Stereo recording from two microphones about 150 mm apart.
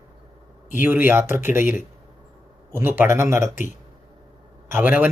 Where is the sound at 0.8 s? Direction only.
15° right (ahead or behind).